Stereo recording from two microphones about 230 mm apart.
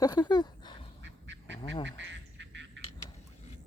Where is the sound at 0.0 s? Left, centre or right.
Centre.